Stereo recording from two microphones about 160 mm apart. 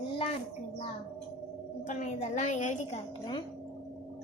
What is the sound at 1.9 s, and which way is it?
A woman's voice, 45° left (ahead or behind).